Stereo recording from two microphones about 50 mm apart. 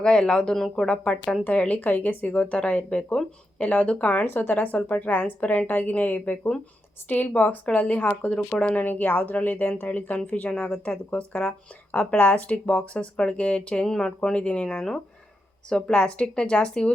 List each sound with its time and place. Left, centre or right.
0.0 s speech: centre
1.5 s speech: left
13.8 s speech: centre
14.2 s speech: left
14.8 s speech: centre
15.9 s speech: left